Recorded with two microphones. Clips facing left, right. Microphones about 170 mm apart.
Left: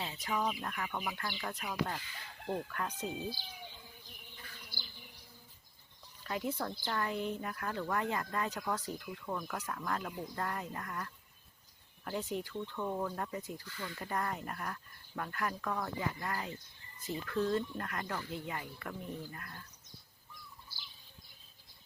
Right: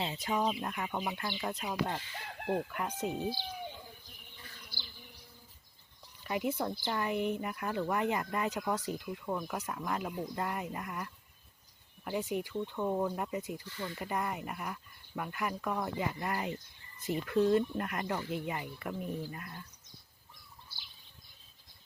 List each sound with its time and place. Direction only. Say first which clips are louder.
0.0 s speech: right 3 dB; 25° right (ahead or behind)
3.0 s speech: right 8 dB; 60° right (ahead or behind)
6.2 s speech: right 4 dB; 15° right (ahead or behind)
13.7 s speech: right 4 dB; 25° right (ahead or behind)
14.0 s speech: right 1 dB; 10° right (ahead or behind)